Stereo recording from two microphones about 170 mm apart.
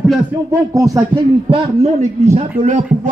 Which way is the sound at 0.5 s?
20° right (ahead or behind).